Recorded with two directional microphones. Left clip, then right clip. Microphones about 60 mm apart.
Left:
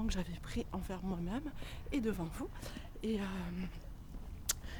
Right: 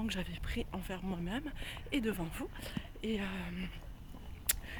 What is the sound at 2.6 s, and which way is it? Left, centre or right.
Speech, left.